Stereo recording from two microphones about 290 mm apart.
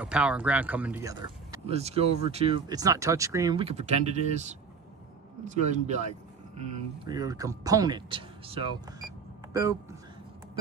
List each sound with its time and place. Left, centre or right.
0.0 s speech: centre; by 6.0 s right
7.1 s speech: centre